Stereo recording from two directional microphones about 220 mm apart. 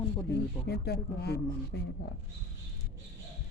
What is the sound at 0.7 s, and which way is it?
Speech, 45° left (ahead or behind).